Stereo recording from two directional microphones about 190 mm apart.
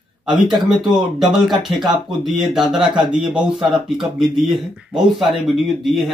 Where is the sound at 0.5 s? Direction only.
Centre (ahead or behind).